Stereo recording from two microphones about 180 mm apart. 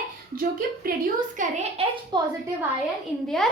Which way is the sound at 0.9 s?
50° right (ahead or behind).